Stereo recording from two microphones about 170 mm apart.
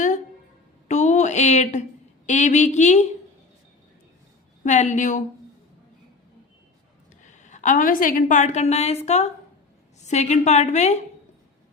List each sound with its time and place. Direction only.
0.9 s a sound: 45° left (ahead or behind)
2.2 s a woman's voice: 45° left (ahead or behind)
4.6 s a woman's voice: 45° left (ahead or behind)
7.2 s a woman's voice: 45° left (ahead or behind)